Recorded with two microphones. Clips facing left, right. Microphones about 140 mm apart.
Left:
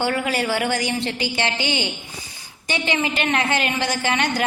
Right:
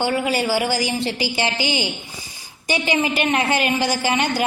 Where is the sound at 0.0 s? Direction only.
25° right (ahead or behind).